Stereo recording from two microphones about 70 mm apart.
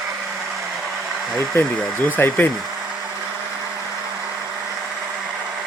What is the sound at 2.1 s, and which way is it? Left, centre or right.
Speech, left.